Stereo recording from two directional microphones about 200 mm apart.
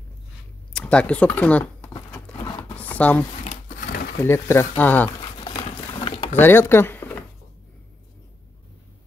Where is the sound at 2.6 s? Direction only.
10° left (ahead or behind).